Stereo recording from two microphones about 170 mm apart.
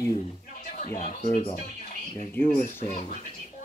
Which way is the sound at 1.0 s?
35° left (ahead or behind).